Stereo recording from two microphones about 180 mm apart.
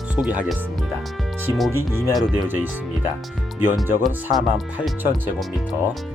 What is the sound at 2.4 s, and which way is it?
Speech, 10° right (ahead or behind).